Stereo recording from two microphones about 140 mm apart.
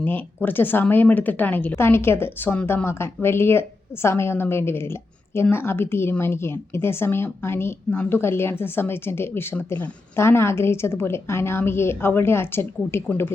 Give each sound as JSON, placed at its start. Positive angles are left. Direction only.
{"t": 0.0, "sound": "speech", "side_deg": 15}